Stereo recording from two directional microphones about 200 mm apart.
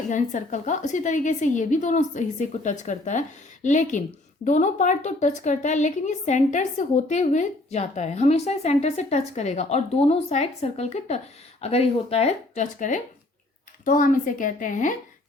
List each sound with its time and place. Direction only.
0.1 s a woman's voice: 40° left (ahead or behind)